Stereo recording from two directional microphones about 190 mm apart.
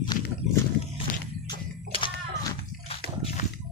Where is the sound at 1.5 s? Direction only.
25° left (ahead or behind).